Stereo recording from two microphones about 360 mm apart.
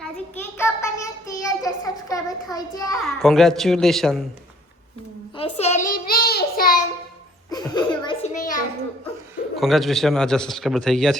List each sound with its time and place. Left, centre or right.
0.0 s child singing: centre
3.0 s a man's voice: centre
5.4 s child singing: centre
7.5 s a sound: centre
9.6 s a man's voice: centre